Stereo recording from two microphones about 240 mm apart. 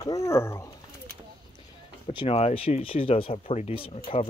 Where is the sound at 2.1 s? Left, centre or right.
Left.